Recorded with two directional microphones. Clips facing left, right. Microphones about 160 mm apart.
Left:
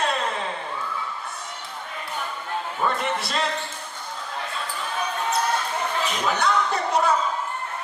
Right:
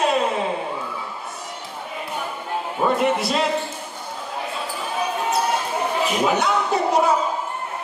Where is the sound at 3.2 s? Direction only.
10° right (ahead or behind).